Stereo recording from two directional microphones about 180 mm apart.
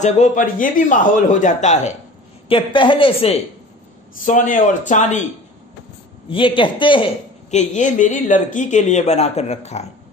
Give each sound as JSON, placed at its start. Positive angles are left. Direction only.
{"t": 0.0, "sound": "a man's voice", "side_deg": 45}
{"t": 2.4, "sound": "a woman's voice", "side_deg": 30}
{"t": 4.2, "sound": "a man's voice", "side_deg": 45}
{"t": 6.3, "sound": "a woman's voice", "side_deg": 30}
{"t": 7.5, "sound": "speech", "side_deg": 40}